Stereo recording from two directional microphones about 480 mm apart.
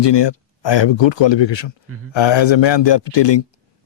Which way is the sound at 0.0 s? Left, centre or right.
Left.